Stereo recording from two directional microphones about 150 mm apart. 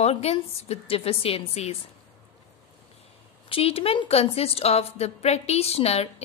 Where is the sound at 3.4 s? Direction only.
40° left (ahead or behind).